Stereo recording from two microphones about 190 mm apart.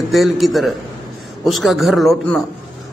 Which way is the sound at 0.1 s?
Centre (ahead or behind).